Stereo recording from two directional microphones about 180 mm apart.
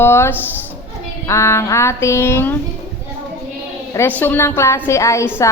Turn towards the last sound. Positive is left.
turn(degrees=15)  # may be behind; listen again after turning